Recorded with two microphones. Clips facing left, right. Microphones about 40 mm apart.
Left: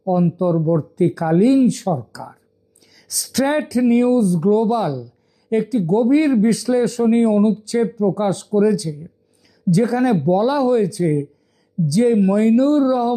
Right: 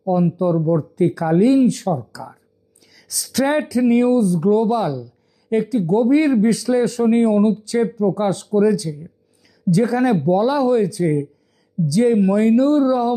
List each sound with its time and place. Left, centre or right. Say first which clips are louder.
0.0 s speech: even; centre
2.8 s a sound: right 1 dB; centre
3.1 s speech: even; centre